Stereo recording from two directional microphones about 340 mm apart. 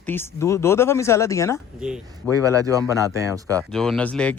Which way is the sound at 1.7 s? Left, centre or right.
Centre.